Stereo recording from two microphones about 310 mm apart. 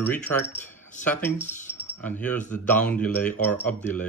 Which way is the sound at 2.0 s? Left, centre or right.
Centre.